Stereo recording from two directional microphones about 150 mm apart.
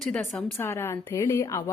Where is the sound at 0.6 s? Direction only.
15° left (ahead or behind).